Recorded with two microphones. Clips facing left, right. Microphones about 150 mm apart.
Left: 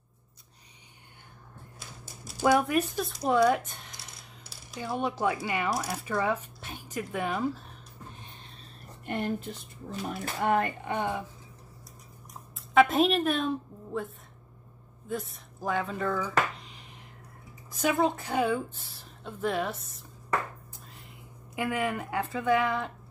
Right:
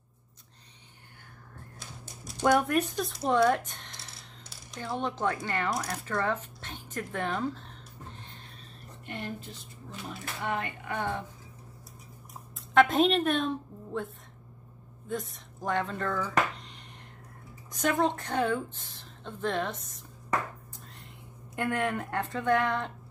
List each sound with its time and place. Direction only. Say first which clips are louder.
1.8 s speech: even; 5° left (ahead or behind)
9.0 s a woman's voice: left 7 dB; 50° left (ahead or behind)
10.9 s speech: left 2 dB; 15° left (ahead or behind)
12.7 s a woman's voice: even; centre (ahead or behind)
21.5 s speech: even; 5° left (ahead or behind)